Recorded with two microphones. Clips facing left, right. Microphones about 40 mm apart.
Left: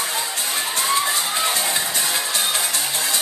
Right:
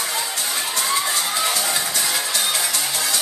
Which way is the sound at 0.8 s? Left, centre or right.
Left.